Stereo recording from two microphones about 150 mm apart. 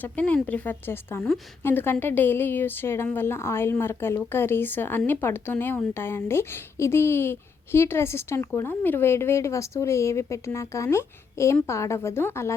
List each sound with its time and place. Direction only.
0.0 s speech: 10° left (ahead or behind)